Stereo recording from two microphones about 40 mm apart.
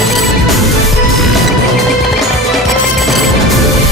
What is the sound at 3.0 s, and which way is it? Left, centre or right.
Music, centre.